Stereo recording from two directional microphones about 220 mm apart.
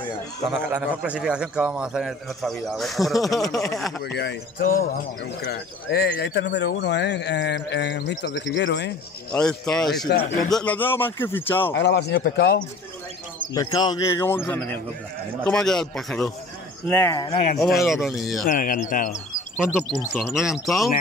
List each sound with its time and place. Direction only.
0.7 s a man's voice: 5° right (ahead or behind)
3.4 s speech: 15° left (ahead or behind)
4.0 s speech: 50° left (ahead or behind)
9.3 s a man's voice: 5° left (ahead or behind)
10.1 s speech: 50° left (ahead or behind)
10.5 s speech: 5° left (ahead or behind)
11.7 s speech: 50° left (ahead or behind)
13.5 s a man's voice: 15° left (ahead or behind)
17.3 s speech: 30° left (ahead or behind)
17.8 s a man's voice: centre (ahead or behind)
18.4 s speech: 40° left (ahead or behind)
20.2 s a man's voice: centre (ahead or behind)